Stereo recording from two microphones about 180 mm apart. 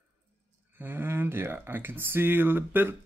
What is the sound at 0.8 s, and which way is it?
Speech, 10° right (ahead or behind).